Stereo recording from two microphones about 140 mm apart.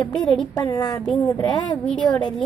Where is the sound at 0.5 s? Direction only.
30° left (ahead or behind).